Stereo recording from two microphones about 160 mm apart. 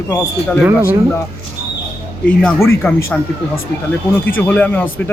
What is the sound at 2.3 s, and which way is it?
Speech, 15° left (ahead or behind).